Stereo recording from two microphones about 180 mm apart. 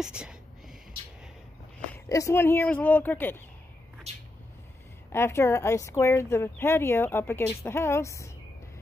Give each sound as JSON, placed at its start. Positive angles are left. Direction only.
{"t": 0.0, "sound": "a sound", "side_deg": -5}
{"t": 2.0, "sound": "speech", "side_deg": 15}
{"t": 5.1, "sound": "speech", "side_deg": 15}